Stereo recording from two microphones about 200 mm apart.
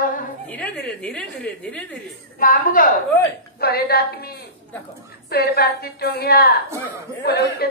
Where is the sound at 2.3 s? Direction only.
45° left (ahead or behind).